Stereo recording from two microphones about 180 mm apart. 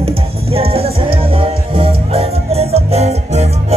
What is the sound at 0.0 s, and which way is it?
Music, 35° right (ahead or behind).